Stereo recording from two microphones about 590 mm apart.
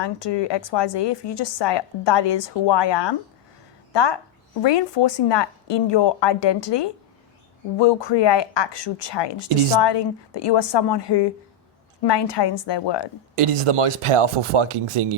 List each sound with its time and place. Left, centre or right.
0.0 s a woman's voice: left
13.3 s speech: right